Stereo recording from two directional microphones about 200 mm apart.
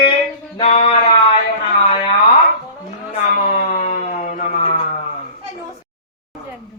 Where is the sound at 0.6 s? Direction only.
35° left (ahead or behind).